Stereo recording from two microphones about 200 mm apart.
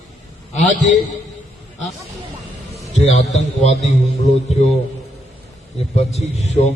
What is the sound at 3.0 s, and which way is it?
A man's voice, 35° left (ahead or behind).